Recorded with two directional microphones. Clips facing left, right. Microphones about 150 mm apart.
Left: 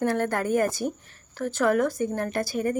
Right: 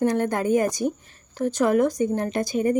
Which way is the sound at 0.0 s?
15° right (ahead or behind).